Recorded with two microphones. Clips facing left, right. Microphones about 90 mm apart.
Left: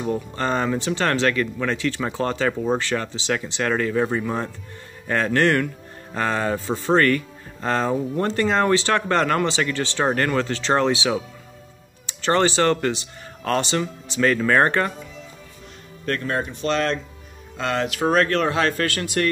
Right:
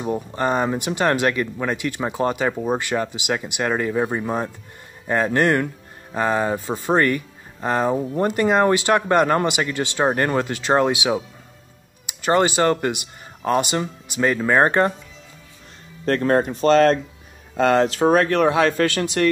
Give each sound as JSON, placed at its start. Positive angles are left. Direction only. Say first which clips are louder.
{"t": 0.0, "sound": "speech", "louder": "right 2 dB", "side_deg": -15}
{"t": 16.1, "sound": "speech", "louder": "right 7 dB", "side_deg": -40}
{"t": 17.8, "sound": "speech", "louder": "right 4 dB", "side_deg": -30}
{"t": 18.1, "sound": "speech", "louder": "right 1 dB", "side_deg": -20}